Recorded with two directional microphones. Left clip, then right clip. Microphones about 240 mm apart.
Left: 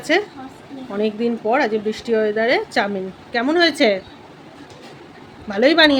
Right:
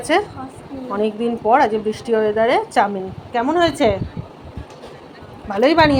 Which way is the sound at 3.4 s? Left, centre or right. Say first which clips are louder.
Even; centre.